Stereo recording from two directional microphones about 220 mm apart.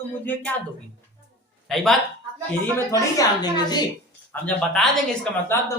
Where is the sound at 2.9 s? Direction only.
15° left (ahead or behind).